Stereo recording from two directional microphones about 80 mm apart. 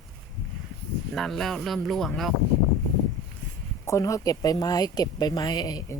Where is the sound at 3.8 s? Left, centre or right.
Left.